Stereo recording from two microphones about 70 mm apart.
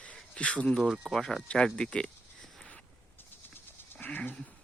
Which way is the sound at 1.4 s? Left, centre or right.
Centre.